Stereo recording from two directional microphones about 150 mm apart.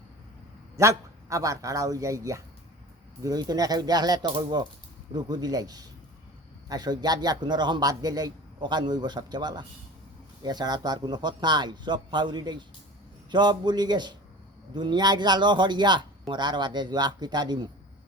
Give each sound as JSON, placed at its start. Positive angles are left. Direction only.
{"t": 0.8, "sound": "a man's voice", "side_deg": -20}